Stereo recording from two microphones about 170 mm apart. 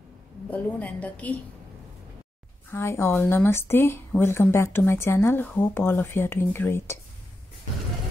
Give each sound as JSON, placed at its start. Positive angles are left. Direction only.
{"t": 0.5, "sound": "speech", "side_deg": 10}
{"t": 2.7, "sound": "speech", "side_deg": 15}